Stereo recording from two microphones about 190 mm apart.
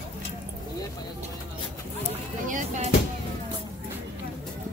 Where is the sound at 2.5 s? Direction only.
40° right (ahead or behind).